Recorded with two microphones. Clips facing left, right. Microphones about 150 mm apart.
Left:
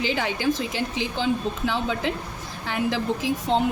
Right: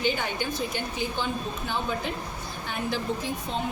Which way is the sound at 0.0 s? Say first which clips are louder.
Left 4 dB; 90° left.